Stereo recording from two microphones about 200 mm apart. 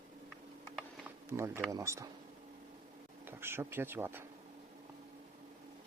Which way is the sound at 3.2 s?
10° right (ahead or behind).